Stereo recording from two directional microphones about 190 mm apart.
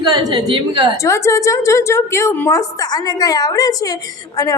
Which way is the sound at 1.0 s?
15° left (ahead or behind).